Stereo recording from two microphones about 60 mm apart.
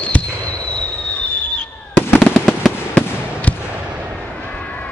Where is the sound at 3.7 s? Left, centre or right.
Right.